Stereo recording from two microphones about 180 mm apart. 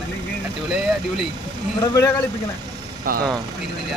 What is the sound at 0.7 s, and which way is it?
Speech, centre (ahead or behind).